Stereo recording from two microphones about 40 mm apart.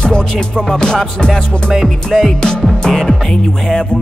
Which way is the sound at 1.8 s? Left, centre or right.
Centre.